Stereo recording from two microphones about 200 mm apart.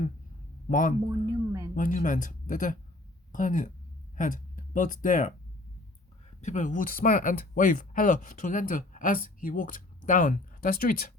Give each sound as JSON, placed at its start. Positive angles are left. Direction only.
{"t": 0.7, "sound": "speech", "side_deg": 40}
{"t": 1.0, "sound": "speech", "side_deg": -15}
{"t": 1.7, "sound": "speech", "side_deg": 40}
{"t": 6.4, "sound": "speech", "side_deg": 35}